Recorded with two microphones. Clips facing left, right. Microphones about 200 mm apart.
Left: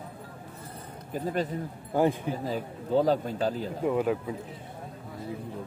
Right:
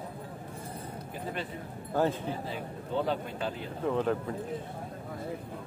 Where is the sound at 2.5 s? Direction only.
40° left (ahead or behind).